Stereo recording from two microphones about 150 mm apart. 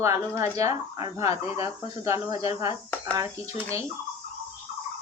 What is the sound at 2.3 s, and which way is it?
Fowl, 40° left (ahead or behind).